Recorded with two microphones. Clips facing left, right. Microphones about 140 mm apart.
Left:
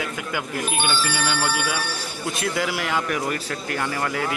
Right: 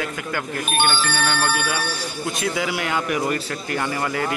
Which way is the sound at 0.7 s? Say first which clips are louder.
Right 4 dB; 65° right (ahead or behind).